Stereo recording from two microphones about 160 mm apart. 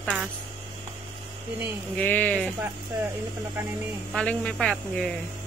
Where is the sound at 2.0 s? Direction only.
10° left (ahead or behind).